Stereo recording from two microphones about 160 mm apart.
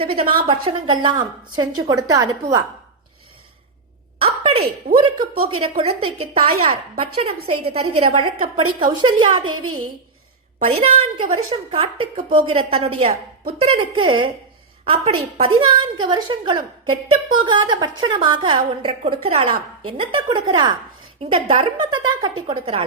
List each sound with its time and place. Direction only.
0.0 s a woman's voice: 35° right (ahead or behind)
4.2 s a sound: 40° right (ahead or behind)
5.5 s a woman's voice: 35° right (ahead or behind)
10.6 s a woman's voice: 35° right (ahead or behind)